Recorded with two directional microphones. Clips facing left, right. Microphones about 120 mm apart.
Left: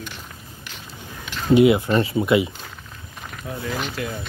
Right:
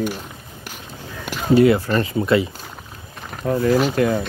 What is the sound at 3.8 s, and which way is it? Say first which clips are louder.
Speech: right 11 dB; 55° right (ahead or behind).